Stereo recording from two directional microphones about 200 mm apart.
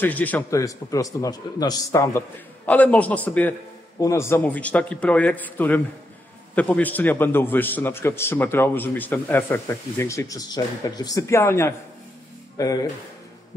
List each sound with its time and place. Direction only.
0.0 s a man's voice: 10° left (ahead or behind)